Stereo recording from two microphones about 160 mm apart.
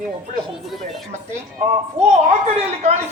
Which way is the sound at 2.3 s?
45° right (ahead or behind).